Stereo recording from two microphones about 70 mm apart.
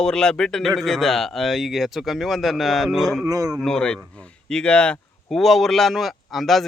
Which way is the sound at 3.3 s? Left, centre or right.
Right.